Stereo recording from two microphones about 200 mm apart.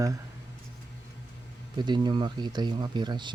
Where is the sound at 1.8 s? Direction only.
20° right (ahead or behind).